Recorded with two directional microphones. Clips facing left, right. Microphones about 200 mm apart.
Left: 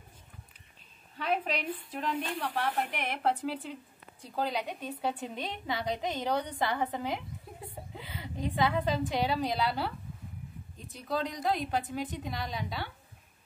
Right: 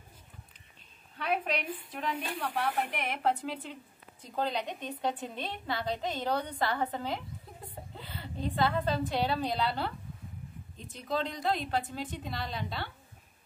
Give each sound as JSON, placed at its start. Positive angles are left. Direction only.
{"t": 1.2, "sound": "a woman's voice", "side_deg": -5}